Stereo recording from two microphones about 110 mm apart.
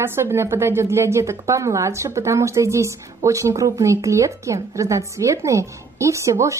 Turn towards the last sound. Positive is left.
turn(degrees=-25)  # may be behind; listen again after turning